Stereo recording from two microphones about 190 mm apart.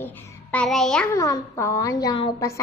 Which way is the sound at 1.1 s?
15° left (ahead or behind).